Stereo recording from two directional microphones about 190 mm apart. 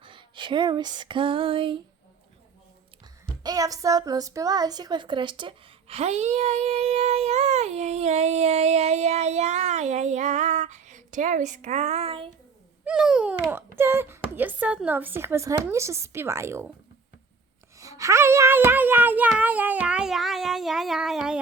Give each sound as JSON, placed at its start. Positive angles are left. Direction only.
{"t": 0.0, "sound": "a sound", "side_deg": -25}
{"t": 3.4, "sound": "a woman's voice", "side_deg": -20}
{"t": 12.8, "sound": "speech", "side_deg": -5}
{"t": 17.7, "sound": "speech", "side_deg": -15}